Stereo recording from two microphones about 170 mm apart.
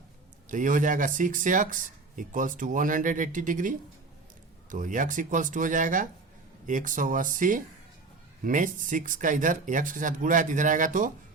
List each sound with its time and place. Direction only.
0.4 s speech: 50° right (ahead or behind)